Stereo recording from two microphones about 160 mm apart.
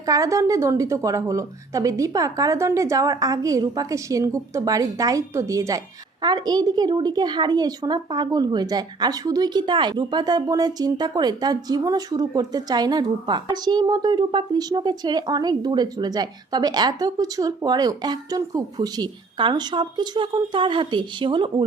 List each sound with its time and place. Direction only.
0.0 s speech: 20° right (ahead or behind)